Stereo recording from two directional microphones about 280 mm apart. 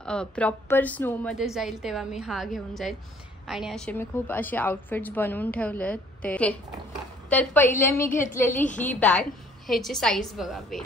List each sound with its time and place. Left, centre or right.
0.0 s a woman's voice: centre
8.1 s a woman's voice: left
8.7 s a woman's voice: centre